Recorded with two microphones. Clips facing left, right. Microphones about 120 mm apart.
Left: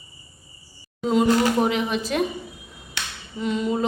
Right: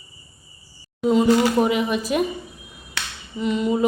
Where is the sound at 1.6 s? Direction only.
5° right (ahead or behind).